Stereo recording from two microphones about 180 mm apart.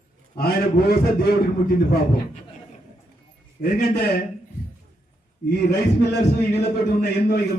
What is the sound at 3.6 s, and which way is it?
Speech, 60° left (ahead or behind).